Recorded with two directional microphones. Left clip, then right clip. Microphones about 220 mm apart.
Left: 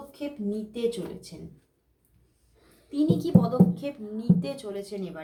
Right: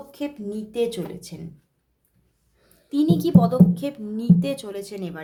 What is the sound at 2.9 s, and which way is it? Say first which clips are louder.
Speech: right 4 dB; 45° right (ahead or behind).